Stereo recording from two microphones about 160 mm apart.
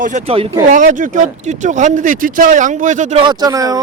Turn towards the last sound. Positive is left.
turn(degrees=-20)  # may be behind; listen again after turning